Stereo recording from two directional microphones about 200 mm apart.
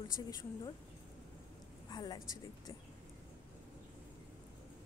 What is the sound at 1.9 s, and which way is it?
Speech, 20° left (ahead or behind).